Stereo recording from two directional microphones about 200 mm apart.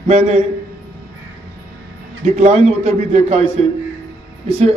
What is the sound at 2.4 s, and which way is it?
A man's voice, 35° right (ahead or behind).